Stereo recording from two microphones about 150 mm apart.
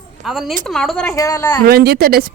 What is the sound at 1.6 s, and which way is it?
Speech, 90° right.